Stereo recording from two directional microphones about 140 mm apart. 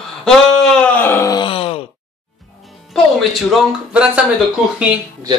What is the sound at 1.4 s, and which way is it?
Groan, 40° left (ahead or behind).